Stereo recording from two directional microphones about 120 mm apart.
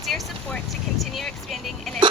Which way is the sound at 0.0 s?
Centre (ahead or behind).